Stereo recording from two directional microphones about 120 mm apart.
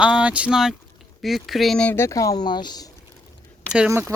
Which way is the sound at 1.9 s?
25° left (ahead or behind).